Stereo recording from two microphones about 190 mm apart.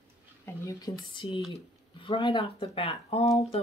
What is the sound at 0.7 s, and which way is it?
Speech, 20° left (ahead or behind).